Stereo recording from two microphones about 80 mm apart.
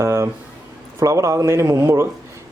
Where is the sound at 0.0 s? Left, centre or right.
Right.